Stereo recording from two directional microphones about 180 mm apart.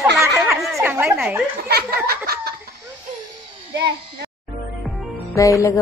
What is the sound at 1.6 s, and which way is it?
Speech, 60° right (ahead or behind).